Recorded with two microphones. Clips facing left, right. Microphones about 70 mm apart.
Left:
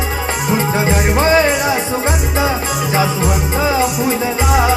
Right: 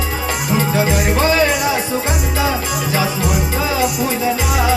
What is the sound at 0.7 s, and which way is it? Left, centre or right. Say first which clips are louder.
Music: left 1 dB; left.